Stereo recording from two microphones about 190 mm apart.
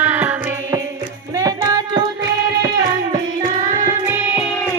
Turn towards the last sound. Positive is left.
turn(degrees=-40)  # may be behind; listen again after turning